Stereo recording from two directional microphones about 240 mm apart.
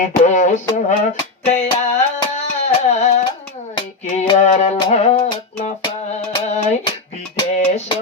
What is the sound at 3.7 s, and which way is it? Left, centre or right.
Music, left.